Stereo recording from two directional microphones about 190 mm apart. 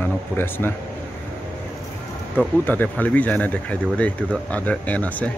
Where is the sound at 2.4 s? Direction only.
10° left (ahead or behind).